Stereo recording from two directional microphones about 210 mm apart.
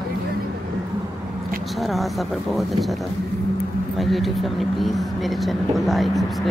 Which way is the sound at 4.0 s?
Centre (ahead or behind).